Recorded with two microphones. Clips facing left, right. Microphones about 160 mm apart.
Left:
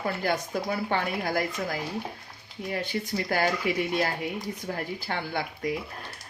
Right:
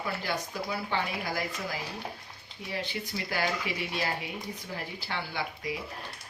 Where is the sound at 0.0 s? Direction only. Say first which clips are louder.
Left 5 dB; 50° left (ahead or behind).